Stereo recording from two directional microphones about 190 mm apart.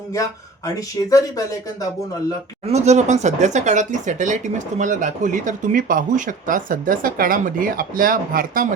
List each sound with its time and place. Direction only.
0.1 s speech: 15° left (ahead or behind)
2.6 s speech: 35° right (ahead or behind)